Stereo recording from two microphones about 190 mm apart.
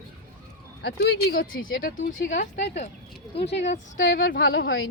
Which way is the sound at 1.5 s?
90° left.